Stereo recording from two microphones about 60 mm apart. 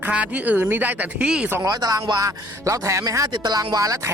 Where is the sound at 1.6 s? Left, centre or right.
Right.